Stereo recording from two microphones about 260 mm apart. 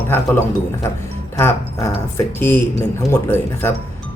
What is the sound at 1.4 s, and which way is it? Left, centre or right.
Speech, centre.